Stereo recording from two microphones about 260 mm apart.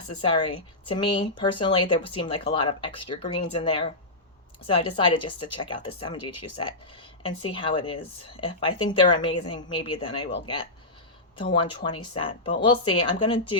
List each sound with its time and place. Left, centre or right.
0.2 s speech: centre